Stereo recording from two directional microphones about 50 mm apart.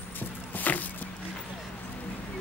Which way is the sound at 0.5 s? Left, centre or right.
Left.